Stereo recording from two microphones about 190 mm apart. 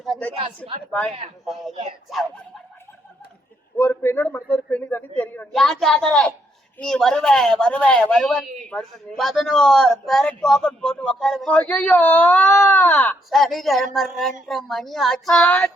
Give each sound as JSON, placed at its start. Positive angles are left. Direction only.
{"t": 0.0, "sound": "a sound", "side_deg": 5}
{"t": 0.3, "sound": "a woman's voice", "side_deg": -30}
{"t": 0.9, "sound": "speech", "side_deg": 5}
{"t": 3.8, "sound": "a man's voice", "side_deg": 10}